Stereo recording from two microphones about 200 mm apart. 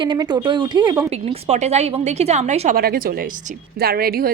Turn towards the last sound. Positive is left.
turn(degrees=-50)  # may be behind; listen again after turning